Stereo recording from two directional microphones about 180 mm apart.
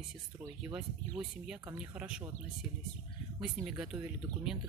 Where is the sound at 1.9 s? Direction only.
10° right (ahead or behind).